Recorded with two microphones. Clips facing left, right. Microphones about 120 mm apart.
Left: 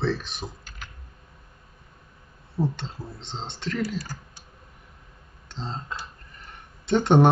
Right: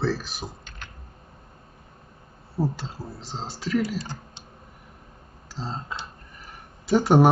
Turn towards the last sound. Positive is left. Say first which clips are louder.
# right 1 dB
turn(degrees=-5)  # may be behind; listen again after turning